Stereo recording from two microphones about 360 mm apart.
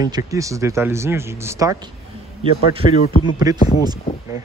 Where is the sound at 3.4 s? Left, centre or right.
Centre.